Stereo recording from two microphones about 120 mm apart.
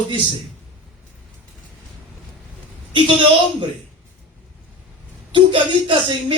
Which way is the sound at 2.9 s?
40° right (ahead or behind).